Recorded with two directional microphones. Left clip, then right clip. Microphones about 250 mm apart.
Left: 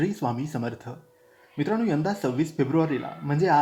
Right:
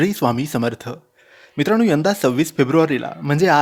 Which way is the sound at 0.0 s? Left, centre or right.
Right.